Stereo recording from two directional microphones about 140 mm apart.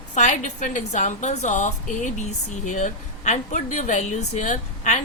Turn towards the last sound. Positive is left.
turn(degrees=60)  # may be behind; listen again after turning